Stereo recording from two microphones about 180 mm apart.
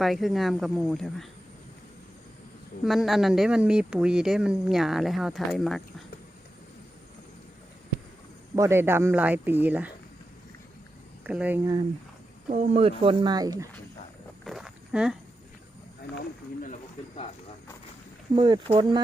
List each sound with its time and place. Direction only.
0.0 s speech: centre (ahead or behind)
2.8 s speech: centre (ahead or behind)
8.5 s speech: 15° right (ahead or behind)
11.3 s speech: 10° right (ahead or behind)
12.5 s speech: 35° right (ahead or behind); by 13.7 s 20° right (ahead or behind)
14.4 s wild animals: centre (ahead or behind)
18.3 s speech: 25° right (ahead or behind)